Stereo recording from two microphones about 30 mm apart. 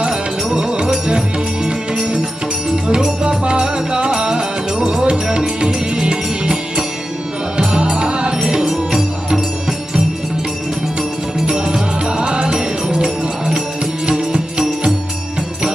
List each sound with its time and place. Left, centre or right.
0.1 s music: right
3.2 s music: right
8.6 s music: centre
11.4 s music: right